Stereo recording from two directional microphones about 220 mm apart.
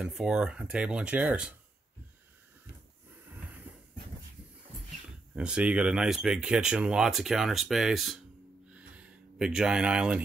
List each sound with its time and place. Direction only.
0.0 s speech: 5° right (ahead or behind)
5.3 s speech: 5° right (ahead or behind)
8.7 s a sound: 5° right (ahead or behind)